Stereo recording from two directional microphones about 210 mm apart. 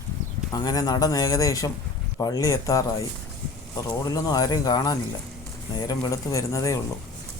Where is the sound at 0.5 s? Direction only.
20° left (ahead or behind).